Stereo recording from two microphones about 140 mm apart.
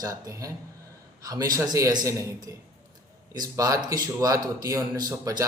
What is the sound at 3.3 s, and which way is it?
Speech, 25° right (ahead or behind).